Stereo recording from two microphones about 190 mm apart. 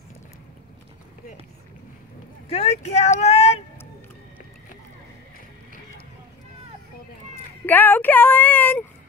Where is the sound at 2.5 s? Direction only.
35° left (ahead or behind).